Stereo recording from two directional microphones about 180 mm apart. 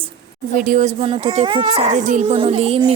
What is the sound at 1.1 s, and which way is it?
Speech, 30° right (ahead or behind).